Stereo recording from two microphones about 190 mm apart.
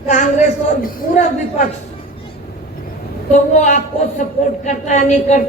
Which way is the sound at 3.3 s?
40° left (ahead or behind).